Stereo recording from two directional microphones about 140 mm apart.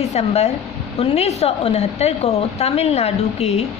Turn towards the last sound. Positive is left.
turn(degrees=50)  # may be behind; listen again after turning